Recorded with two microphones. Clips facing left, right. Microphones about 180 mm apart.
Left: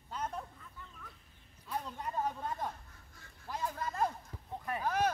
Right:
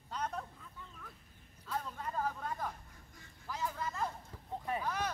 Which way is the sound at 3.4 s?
45° left (ahead or behind).